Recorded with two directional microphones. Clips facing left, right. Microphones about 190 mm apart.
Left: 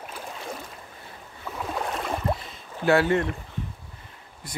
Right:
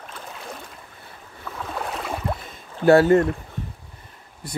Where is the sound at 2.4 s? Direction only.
45° right (ahead or behind).